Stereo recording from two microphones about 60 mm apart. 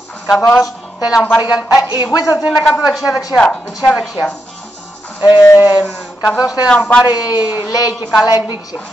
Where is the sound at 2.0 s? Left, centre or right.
Left.